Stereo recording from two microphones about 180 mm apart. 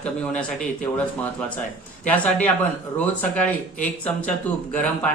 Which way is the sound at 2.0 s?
10° left (ahead or behind).